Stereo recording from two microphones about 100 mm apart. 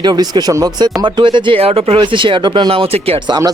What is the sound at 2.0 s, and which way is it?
Speech, 55° right (ahead or behind).